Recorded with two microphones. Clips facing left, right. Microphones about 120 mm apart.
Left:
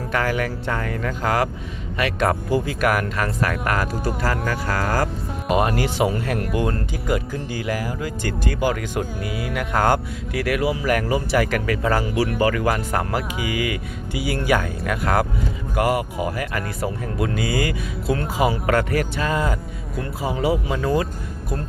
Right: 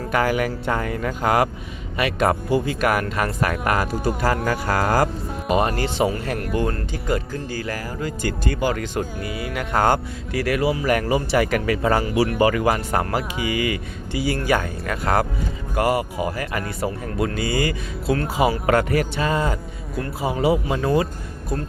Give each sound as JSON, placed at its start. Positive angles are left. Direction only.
{"t": 0.1, "sound": "speech", "side_deg": -10}
{"t": 2.0, "sound": "speech", "side_deg": -5}
{"t": 4.4, "sound": "speech", "side_deg": -30}
{"t": 5.5, "sound": "speech", "side_deg": 5}
{"t": 12.6, "sound": "speech", "side_deg": 0}